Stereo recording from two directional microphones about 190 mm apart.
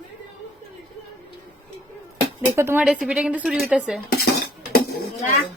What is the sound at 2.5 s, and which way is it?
A woman's voice, 10° right (ahead or behind).